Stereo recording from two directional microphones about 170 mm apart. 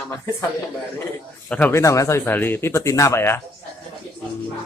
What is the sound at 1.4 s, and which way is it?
Speech, 10° left (ahead or behind).